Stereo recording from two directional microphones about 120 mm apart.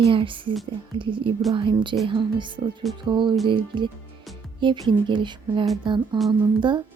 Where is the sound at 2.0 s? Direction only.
40° right (ahead or behind).